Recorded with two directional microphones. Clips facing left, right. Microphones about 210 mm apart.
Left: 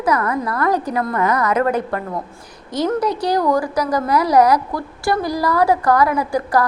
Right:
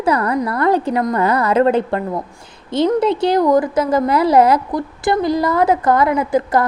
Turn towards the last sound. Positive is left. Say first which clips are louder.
# right 2 dB
turn(degrees=-20)  # may be behind; listen again after turning